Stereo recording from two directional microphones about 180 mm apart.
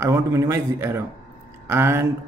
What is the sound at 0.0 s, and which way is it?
A man's voice, 15° right (ahead or behind).